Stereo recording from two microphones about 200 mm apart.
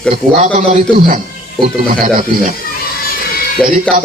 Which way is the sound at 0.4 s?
40° right (ahead or behind).